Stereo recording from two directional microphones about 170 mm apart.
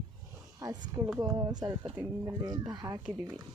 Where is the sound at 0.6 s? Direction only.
20° right (ahead or behind).